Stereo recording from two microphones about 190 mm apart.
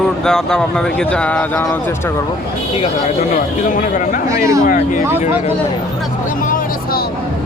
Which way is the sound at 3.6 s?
45° left (ahead or behind).